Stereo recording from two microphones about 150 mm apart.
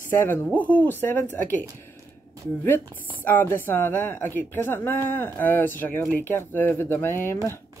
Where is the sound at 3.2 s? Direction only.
15° left (ahead or behind).